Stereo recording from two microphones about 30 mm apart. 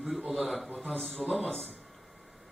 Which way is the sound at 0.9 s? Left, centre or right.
Centre.